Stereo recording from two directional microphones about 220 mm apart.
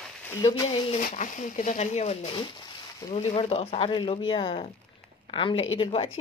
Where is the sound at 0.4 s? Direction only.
20° left (ahead or behind).